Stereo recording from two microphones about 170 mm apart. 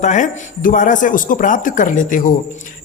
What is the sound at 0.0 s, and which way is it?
A man's voice, 45° left (ahead or behind).